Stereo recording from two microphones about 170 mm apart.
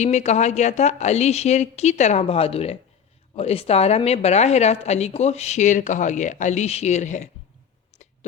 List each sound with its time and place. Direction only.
0.0 s a woman's voice: 40° left (ahead or behind)